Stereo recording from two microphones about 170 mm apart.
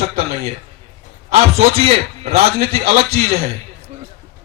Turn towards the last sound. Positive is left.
turn(degrees=-35)  # may be behind; listen again after turning